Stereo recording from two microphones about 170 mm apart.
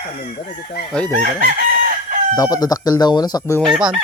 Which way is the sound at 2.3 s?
20° left (ahead or behind).